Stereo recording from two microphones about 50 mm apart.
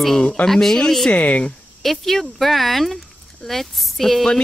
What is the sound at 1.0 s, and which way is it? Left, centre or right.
Speech, left.